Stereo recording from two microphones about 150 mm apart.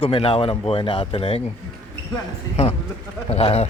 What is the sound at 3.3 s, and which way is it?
Speech, 45° left (ahead or behind).